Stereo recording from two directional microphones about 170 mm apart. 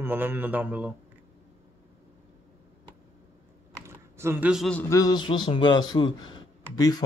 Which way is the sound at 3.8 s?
15° right (ahead or behind).